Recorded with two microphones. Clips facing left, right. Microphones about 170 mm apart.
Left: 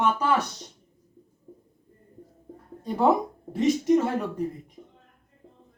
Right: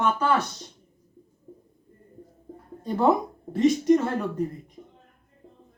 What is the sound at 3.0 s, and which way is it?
Speech, 10° left (ahead or behind).